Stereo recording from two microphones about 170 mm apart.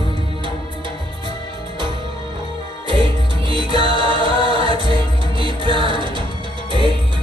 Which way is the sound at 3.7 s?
30° right (ahead or behind).